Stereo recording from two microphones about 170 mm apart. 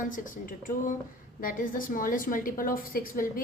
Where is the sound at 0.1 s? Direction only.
50° left (ahead or behind).